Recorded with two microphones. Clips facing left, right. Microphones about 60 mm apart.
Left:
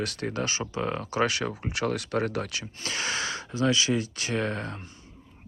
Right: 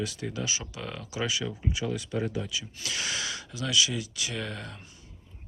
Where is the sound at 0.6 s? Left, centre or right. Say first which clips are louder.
Left 8 dB; left.